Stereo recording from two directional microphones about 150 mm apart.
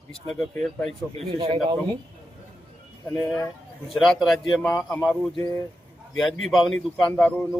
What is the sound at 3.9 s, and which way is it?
A man's voice, centre (ahead or behind).